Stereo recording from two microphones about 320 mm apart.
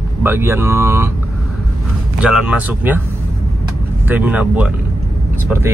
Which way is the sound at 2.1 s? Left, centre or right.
Centre.